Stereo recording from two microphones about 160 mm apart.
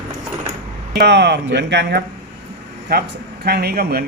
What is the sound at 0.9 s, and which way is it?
Speech, 90° right.